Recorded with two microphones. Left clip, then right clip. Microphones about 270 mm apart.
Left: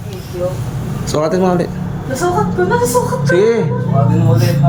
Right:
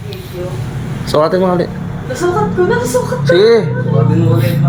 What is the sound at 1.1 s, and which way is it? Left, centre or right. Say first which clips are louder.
Speech: right 3 dB; centre.